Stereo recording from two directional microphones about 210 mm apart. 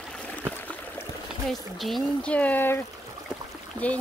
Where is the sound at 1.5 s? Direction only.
Centre (ahead or behind).